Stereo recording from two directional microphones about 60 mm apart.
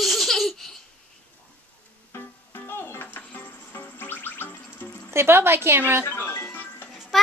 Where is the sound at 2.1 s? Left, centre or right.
Left.